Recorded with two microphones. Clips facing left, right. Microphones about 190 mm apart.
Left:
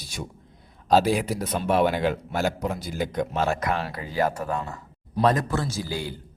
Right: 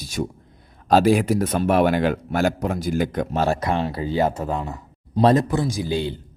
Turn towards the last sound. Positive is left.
turn(degrees=-25)  # may be behind; listen again after turning